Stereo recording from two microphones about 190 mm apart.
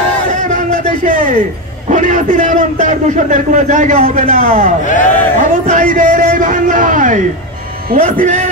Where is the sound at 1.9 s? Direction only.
40° right (ahead or behind).